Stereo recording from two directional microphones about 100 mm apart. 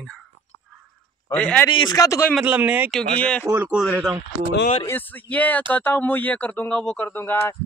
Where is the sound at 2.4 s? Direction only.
15° right (ahead or behind).